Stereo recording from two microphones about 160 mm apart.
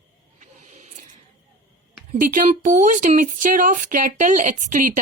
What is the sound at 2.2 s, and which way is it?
Speech, 60° right (ahead or behind).